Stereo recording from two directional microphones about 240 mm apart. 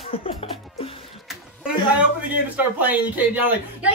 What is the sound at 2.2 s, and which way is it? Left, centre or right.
A man's voice, centre.